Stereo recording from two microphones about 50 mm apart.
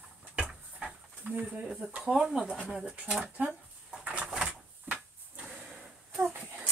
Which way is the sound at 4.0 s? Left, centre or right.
Right.